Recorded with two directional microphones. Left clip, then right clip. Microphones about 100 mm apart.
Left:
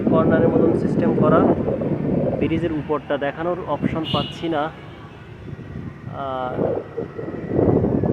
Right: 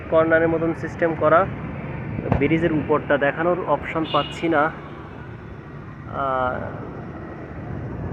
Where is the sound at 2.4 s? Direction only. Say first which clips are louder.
Right 2 dB; 10° left (ahead or behind).